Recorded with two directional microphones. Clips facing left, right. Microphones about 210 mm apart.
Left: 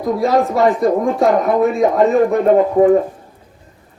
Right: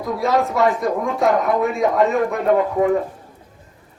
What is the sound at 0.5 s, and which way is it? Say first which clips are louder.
Speech: left 5 dB; 30° left (ahead or behind).